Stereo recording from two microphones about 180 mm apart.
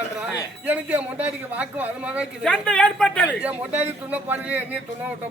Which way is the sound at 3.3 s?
5° right (ahead or behind).